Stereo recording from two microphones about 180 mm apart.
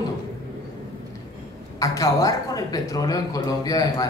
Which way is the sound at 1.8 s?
20° left (ahead or behind).